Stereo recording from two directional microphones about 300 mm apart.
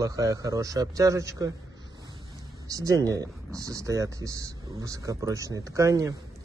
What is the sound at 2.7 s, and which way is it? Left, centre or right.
Speech, centre.